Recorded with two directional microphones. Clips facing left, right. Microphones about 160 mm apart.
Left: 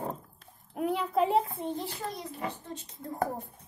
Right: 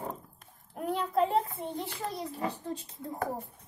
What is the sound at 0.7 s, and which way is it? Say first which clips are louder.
Speech: left 1 dB; centre (ahead or behind).